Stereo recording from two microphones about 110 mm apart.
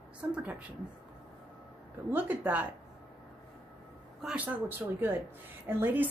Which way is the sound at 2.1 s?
15° right (ahead or behind).